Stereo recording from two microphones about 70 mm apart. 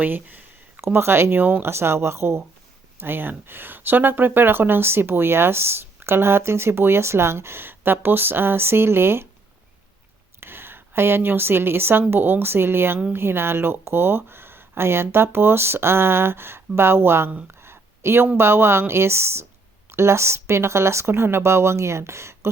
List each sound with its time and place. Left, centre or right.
0.0 s speech: right
10.4 s a woman's voice: right
17.5 s a sound: right
18.3 s speech: right